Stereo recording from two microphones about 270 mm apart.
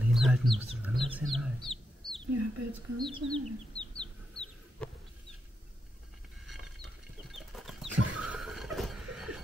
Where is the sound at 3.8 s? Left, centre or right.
Centre.